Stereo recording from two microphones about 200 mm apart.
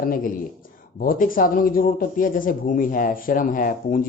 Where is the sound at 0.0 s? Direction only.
45° left (ahead or behind).